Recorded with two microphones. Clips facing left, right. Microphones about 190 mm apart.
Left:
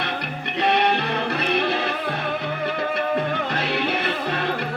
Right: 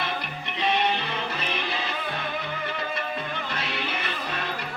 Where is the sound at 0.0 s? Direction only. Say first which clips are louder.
Left 3 dB; 65° left (ahead or behind).